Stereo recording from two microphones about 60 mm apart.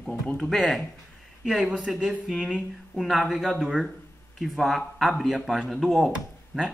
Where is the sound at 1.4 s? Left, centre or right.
Centre.